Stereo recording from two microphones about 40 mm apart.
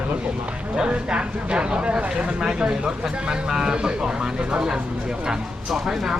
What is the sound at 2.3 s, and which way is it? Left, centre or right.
Speech, centre.